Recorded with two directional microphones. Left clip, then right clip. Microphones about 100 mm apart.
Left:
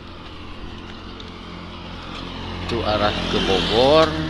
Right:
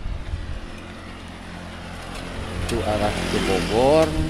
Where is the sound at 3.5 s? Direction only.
15° left (ahead or behind).